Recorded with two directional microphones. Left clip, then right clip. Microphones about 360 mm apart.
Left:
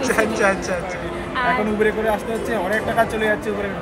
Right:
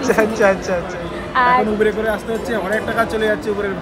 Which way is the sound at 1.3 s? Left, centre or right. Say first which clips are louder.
Right 7 dB; right.